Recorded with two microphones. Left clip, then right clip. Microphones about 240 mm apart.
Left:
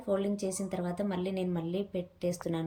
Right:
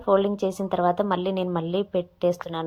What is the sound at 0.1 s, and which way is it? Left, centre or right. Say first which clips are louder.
A woman's voice: right 11 dB; centre.